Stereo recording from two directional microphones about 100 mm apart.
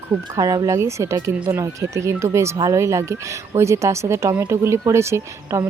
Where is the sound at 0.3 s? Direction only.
35° right (ahead or behind).